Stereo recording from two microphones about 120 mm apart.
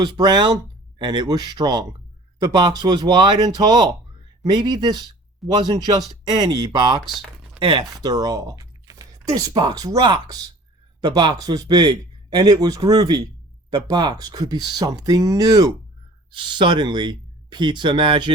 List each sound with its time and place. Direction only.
0.0 s speech: 35° right (ahead or behind)
7.0 s a sound: centre (ahead or behind)
7.6 s speech: 40° right (ahead or behind)
16.3 s speech: 40° right (ahead or behind)